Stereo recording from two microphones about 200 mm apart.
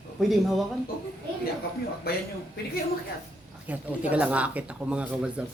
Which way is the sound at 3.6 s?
5° right (ahead or behind).